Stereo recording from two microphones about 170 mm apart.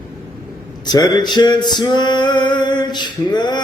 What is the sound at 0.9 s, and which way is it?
Male singing, 25° left (ahead or behind).